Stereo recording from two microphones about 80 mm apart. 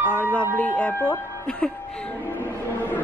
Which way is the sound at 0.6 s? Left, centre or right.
Centre.